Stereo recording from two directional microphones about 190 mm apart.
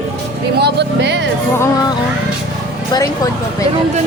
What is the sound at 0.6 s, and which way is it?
Vehicle, 65° right (ahead or behind).